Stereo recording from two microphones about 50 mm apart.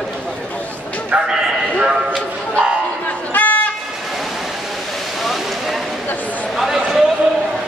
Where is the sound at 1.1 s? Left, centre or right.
Right.